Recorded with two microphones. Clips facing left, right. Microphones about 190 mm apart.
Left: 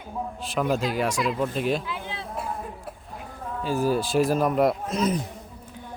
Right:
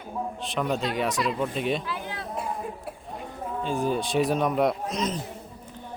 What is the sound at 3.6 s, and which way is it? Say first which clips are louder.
A man's voice: left 3 dB; 5° left (ahead or behind).